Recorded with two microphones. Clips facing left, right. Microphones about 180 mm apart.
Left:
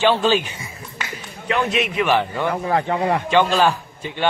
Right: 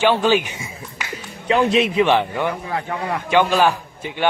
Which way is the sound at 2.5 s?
45° left (ahead or behind).